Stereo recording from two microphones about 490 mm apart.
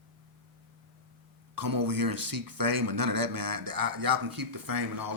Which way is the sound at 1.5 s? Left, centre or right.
Right.